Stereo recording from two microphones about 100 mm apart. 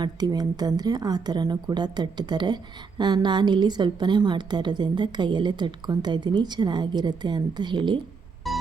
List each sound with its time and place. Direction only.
0.0 s a woman's voice: 40° right (ahead or behind)
8.4 s music: centre (ahead or behind)